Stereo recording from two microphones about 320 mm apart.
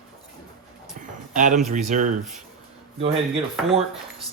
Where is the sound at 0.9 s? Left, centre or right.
Right.